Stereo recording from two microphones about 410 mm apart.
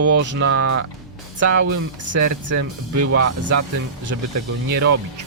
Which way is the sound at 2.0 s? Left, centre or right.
Right.